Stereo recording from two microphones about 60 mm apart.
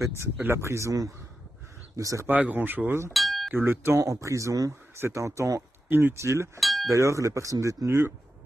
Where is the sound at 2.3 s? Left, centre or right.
Right.